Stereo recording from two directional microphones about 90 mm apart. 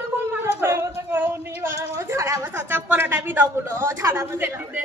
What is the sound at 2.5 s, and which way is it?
Speech, 25° right (ahead or behind).